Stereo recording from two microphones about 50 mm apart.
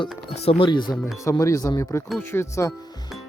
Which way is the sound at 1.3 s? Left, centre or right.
Left.